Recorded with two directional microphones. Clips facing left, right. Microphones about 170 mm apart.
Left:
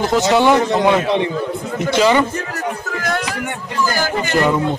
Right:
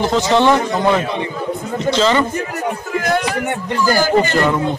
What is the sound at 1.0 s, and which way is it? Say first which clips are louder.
Speech: left 5 dB; 80° left.